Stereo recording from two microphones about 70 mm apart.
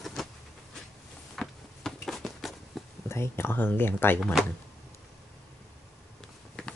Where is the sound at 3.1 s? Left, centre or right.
Left.